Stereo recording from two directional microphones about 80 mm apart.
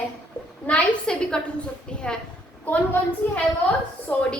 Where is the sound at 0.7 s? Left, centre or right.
Centre.